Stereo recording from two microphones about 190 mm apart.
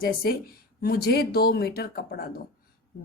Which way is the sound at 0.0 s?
50° left (ahead or behind).